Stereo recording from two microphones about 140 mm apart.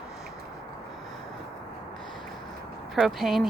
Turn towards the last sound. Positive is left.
turn(degrees=0)  # may be behind; listen again after turning